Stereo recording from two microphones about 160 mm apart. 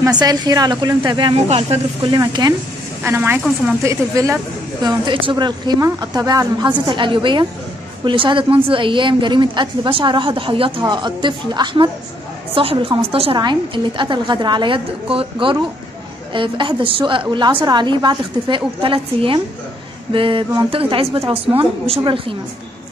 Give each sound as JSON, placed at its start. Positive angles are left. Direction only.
{"t": 0.2, "sound": "speech", "side_deg": -25}
{"t": 3.0, "sound": "a woman's voice", "side_deg": -15}
{"t": 4.8, "sound": "a woman's voice", "side_deg": -30}